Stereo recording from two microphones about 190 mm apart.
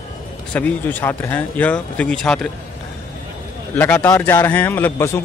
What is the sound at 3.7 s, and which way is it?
Speech, 10° left (ahead or behind).